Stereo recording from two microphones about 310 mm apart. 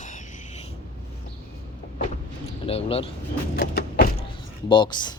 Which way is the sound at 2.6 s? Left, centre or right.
Centre.